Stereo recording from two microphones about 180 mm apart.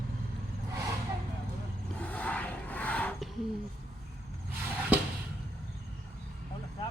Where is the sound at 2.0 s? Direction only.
10° left (ahead or behind).